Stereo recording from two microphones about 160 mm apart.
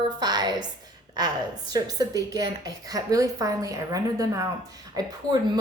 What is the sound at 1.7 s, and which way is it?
A woman's voice, 25° right (ahead or behind).